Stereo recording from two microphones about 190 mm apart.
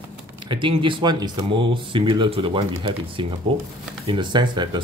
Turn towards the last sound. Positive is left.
turn(degrees=-25)  # may be behind; listen again after turning